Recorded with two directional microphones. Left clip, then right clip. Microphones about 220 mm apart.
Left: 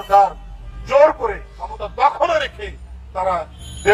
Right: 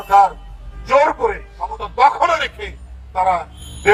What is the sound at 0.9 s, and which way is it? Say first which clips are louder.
Music: left 1 dB; 30° right (ahead or behind).